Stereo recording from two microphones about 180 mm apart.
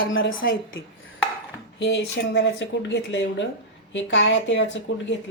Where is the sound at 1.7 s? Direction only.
80° left.